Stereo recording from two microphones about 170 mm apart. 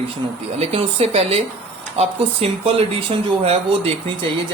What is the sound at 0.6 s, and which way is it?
Speech, 35° right (ahead or behind).